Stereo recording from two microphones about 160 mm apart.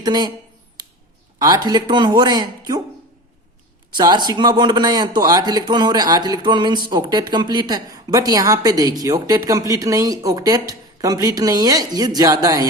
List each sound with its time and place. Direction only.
0.0 s a woman's voice: 25° right (ahead or behind)
0.8 s a sound: 30° right (ahead or behind)
1.4 s a woman's voice: 25° right (ahead or behind)
3.9 s a woman's voice: 25° right (ahead or behind)